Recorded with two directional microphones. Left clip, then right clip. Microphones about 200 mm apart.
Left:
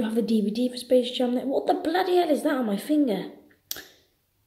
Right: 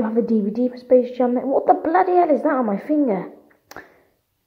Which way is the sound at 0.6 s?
30° right (ahead or behind).